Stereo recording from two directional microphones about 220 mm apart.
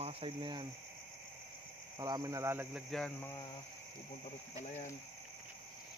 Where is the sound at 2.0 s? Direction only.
15° right (ahead or behind).